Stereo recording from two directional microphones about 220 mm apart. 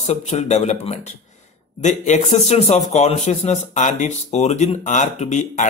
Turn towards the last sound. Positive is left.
turn(degrees=35)  # may be behind; listen again after turning